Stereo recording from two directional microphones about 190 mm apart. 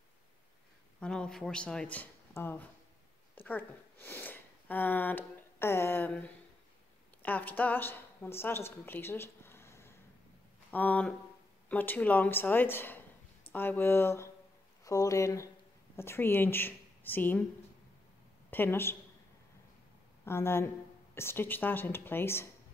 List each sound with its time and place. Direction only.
1.0 s speech: 5° left (ahead or behind)
18.5 s speech: 10° left (ahead or behind)
20.2 s speech: 15° left (ahead or behind)